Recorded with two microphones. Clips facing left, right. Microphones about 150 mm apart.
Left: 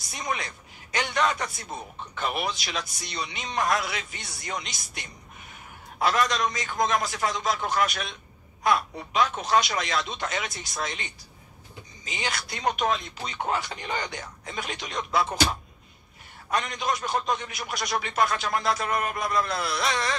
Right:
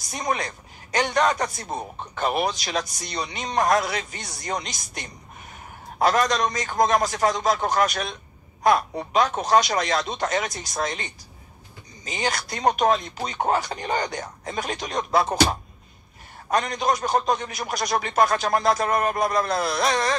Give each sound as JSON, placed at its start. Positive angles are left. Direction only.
{"t": 0.1, "sound": "a man's voice", "side_deg": -40}
{"t": 16.4, "sound": "a man's voice", "side_deg": -40}